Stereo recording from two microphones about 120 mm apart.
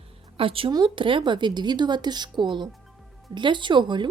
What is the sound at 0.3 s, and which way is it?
A woman's voice, 50° right (ahead or behind).